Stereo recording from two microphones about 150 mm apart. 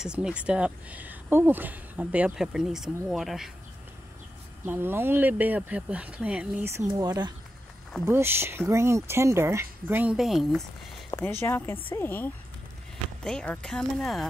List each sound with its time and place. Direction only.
0.0 s speech: 5° right (ahead or behind)
4.6 s speech: 15° right (ahead or behind)
7.0 s speech: 25° right (ahead or behind)
8.0 s speech: 15° right (ahead or behind)
10.1 s speech: centre (ahead or behind)
11.1 s speech: 15° left (ahead or behind)